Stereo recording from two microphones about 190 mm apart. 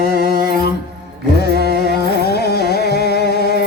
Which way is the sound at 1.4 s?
60° left (ahead or behind).